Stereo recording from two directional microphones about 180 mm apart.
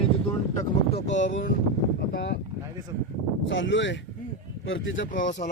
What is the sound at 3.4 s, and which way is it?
Speech, 90° left.